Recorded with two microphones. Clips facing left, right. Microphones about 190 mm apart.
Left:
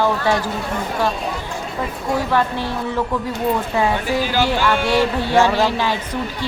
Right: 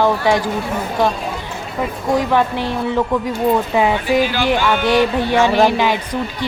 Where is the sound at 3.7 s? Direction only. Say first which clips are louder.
Right 3 dB; 15° right (ahead or behind).